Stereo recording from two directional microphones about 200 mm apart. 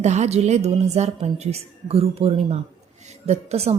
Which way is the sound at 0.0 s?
35° right (ahead or behind).